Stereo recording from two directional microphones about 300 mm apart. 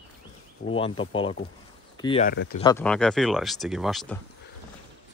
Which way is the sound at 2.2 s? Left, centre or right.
Left.